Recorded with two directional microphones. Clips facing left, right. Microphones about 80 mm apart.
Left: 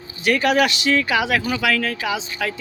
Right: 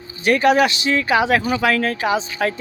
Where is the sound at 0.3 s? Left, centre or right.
Right.